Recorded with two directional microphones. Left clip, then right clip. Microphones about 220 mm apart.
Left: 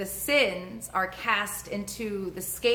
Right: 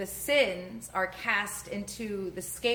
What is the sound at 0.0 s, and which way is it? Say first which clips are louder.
A woman's voice: left 2 dB; 15° left (ahead or behind).